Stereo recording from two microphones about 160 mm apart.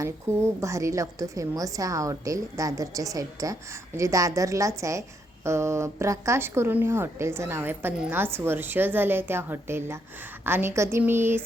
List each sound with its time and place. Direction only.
0.0 s a woman's voice: 20° right (ahead or behind)